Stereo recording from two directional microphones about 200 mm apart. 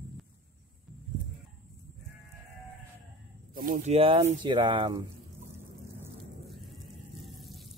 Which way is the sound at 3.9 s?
30° right (ahead or behind).